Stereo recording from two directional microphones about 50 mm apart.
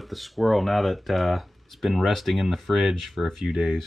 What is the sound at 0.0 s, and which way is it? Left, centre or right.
Speech, centre.